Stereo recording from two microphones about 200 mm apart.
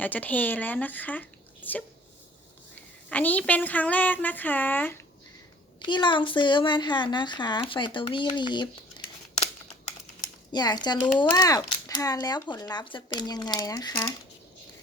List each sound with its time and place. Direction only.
0.0 s speech: 10° left (ahead or behind)
3.1 s a woman's voice: 10° left (ahead or behind)
5.8 s speech: 25° left (ahead or behind)
10.5 s speech: 20° left (ahead or behind)